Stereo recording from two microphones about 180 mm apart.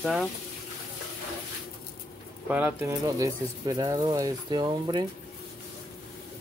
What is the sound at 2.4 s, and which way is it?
Speech, 10° right (ahead or behind).